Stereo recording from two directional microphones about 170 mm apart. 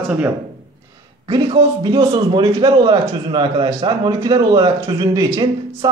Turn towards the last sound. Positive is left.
turn(degrees=-20)  # may be behind; listen again after turning